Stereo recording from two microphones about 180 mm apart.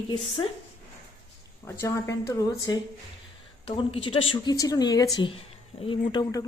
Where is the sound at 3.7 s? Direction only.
30° left (ahead or behind).